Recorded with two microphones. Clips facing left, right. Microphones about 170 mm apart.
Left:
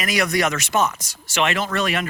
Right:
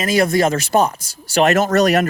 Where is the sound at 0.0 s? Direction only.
30° right (ahead or behind).